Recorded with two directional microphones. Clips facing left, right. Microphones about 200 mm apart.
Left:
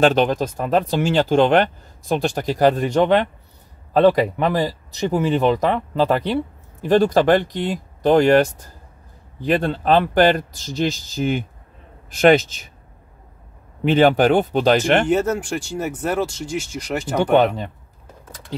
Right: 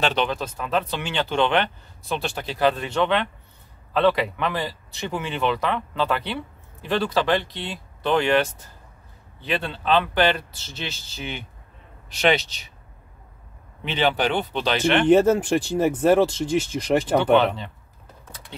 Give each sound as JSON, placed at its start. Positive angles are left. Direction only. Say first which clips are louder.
{"t": 0.0, "sound": "speech", "louder": "left 8 dB", "side_deg": 45}
{"t": 13.8, "sound": "speech", "louder": "left 8 dB", "side_deg": 45}
{"t": 15.0, "sound": "speech", "louder": "right 3 dB", "side_deg": -35}
{"t": 17.2, "sound": "speech", "louder": "left 3 dB", "side_deg": 45}